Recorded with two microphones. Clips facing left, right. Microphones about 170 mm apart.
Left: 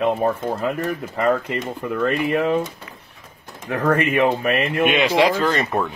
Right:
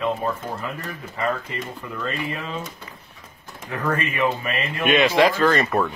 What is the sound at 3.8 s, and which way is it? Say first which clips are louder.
Speech: left 5 dB; 60° left (ahead or behind).